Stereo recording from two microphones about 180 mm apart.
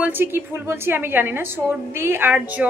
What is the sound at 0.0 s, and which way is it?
Speech, 10° right (ahead or behind).